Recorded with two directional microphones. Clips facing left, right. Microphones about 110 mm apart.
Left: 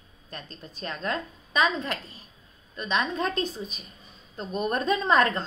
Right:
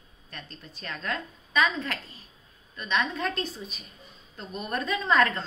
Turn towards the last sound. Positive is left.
turn(degrees=20)  # may be behind; listen again after turning